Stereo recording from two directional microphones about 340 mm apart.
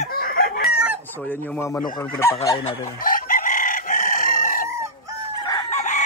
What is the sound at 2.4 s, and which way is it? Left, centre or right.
Chicken, centre.